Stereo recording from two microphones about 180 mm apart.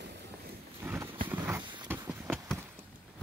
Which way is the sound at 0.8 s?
15° right (ahead or behind).